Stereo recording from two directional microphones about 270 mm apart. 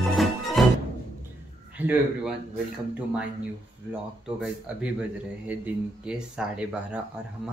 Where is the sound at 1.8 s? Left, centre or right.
Centre.